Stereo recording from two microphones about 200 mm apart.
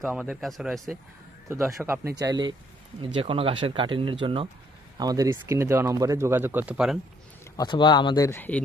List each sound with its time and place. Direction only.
0.0 s speech: 5° right (ahead or behind)
1.5 s speech: 15° right (ahead or behind)
7.5 s speech: 20° left (ahead or behind)